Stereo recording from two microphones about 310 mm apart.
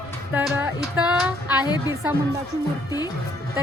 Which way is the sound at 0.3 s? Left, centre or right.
Centre.